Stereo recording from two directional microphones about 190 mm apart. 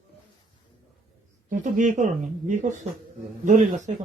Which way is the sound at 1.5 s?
40° right (ahead or behind).